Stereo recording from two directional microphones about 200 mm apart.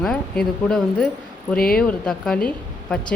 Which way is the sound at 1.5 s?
45° left (ahead or behind).